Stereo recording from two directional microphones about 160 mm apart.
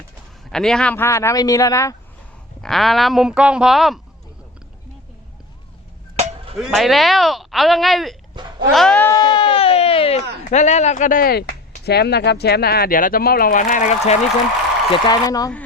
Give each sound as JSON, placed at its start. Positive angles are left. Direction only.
{"t": 0.5, "sound": "speech", "side_deg": 5}
{"t": 2.6, "sound": "speech", "side_deg": 0}
{"t": 6.1, "sound": "a sound", "side_deg": -35}
{"t": 6.6, "sound": "speech", "side_deg": 0}
{"t": 9.0, "sound": "a sound", "side_deg": 25}
{"t": 10.5, "sound": "speech", "side_deg": 45}
{"t": 11.9, "sound": "speech", "side_deg": 90}
{"t": 14.9, "sound": "speech", "side_deg": 25}